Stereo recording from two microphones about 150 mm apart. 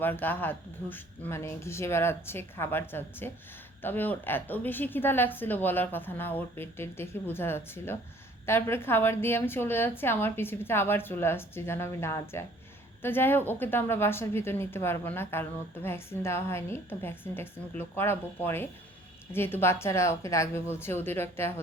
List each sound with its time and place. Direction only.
0.0 s a woman's voice: 15° left (ahead or behind)